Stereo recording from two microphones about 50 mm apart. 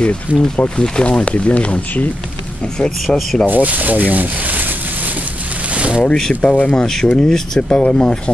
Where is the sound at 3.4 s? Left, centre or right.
Right.